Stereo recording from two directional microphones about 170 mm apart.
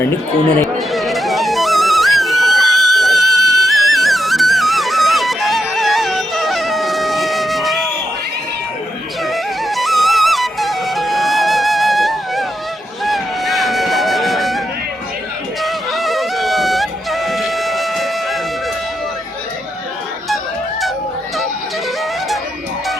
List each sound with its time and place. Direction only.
0.8 s music: centre (ahead or behind)
3.3 s music: 20° right (ahead or behind)
3.6 s music: centre (ahead or behind)
9.2 s music: centre (ahead or behind)
13.1 s a sound: centre (ahead or behind)
15.6 s music: centre (ahead or behind)